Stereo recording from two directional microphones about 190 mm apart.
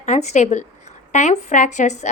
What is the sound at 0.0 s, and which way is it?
A woman's voice, 40° left (ahead or behind).